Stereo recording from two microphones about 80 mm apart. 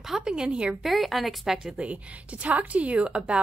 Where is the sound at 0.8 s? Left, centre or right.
Centre.